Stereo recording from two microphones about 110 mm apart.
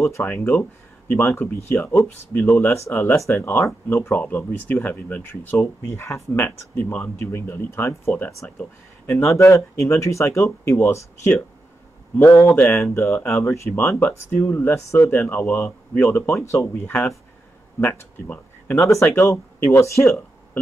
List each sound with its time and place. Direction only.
0.0 s speech: 25° left (ahead or behind)
0.3 s speech: 15° left (ahead or behind)
8.5 s speech: 10° left (ahead or behind)
9.2 s speech: 25° left (ahead or behind)